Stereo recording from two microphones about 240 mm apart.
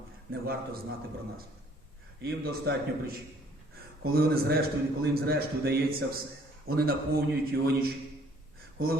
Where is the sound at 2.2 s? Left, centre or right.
Right.